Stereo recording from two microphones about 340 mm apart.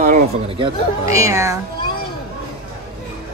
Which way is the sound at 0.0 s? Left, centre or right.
Right.